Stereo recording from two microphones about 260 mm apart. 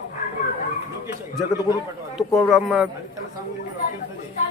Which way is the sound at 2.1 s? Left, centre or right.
Centre.